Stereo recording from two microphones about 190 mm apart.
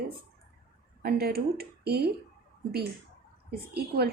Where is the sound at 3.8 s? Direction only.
55° right (ahead or behind).